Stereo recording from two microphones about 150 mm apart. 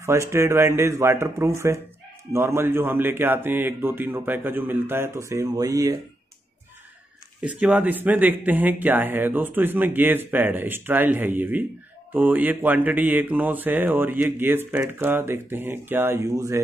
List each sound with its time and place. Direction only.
0.0 s speech: 20° right (ahead or behind)
2.3 s mantra: 15° right (ahead or behind)
7.4 s mantra: 10° right (ahead or behind)